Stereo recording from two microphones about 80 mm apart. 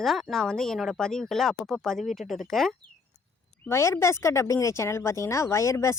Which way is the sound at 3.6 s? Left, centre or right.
Left.